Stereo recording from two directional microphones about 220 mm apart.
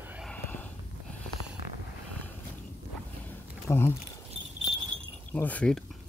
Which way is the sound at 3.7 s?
10° left (ahead or behind).